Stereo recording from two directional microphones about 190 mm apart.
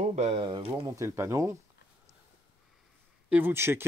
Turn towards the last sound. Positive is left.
turn(degrees=-10)  # may be behind; listen again after turning